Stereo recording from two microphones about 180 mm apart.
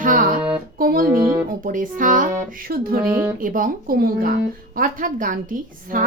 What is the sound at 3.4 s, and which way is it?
Speech, 50° right (ahead or behind).